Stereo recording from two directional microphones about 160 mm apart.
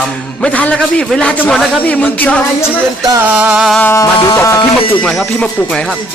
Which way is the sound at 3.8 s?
15° left (ahead or behind).